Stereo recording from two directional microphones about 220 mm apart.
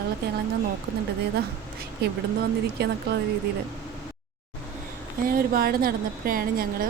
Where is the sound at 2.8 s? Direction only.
50° right (ahead or behind).